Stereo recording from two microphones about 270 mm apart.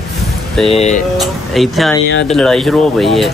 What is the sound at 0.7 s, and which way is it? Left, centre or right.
Speech, left.